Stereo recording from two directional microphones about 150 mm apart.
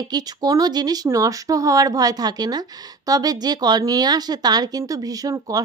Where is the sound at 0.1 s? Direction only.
25° right (ahead or behind).